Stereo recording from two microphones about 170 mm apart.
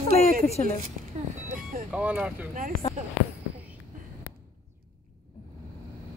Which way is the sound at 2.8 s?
35° left (ahead or behind).